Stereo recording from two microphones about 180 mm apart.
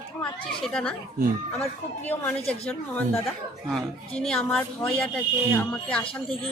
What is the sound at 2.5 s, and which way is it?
A woman's voice, 5° left (ahead or behind).